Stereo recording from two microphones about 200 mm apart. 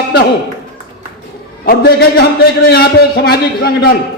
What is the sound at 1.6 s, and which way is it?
A man's voice, 50° left (ahead or behind).